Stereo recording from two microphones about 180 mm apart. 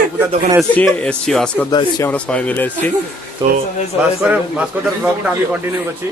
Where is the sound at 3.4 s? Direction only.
25° right (ahead or behind).